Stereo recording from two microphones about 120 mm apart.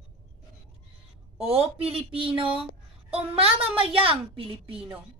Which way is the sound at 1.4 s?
55° right (ahead or behind).